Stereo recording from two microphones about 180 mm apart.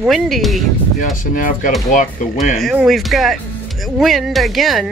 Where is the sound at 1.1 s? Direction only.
50° left (ahead or behind).